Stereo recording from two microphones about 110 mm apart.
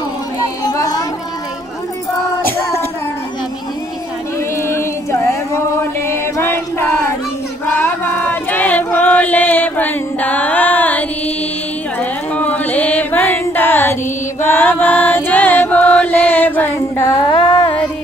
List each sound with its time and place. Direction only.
0.4 s music: 30° left (ahead or behind)
4.6 s a sound: 25° left (ahead or behind)
12.0 s music: 15° left (ahead or behind)
14.4 s chant: 20° left (ahead or behind)
17.3 s carnatic music: 50° left (ahead or behind)